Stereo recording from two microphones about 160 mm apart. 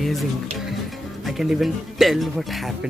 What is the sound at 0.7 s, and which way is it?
Speech, centre (ahead or behind).